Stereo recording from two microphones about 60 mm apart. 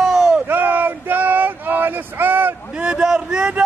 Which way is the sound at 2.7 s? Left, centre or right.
Centre.